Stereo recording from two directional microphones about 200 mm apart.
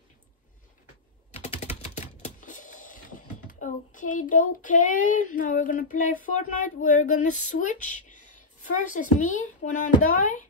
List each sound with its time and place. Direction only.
1.3 s typing: 30° left (ahead or behind)
3.4 s speech: 40° left (ahead or behind)